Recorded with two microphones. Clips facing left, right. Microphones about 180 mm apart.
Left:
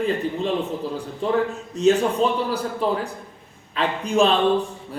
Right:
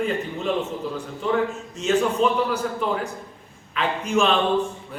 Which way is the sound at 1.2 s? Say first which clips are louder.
Left 1 dB; 35° left (ahead or behind).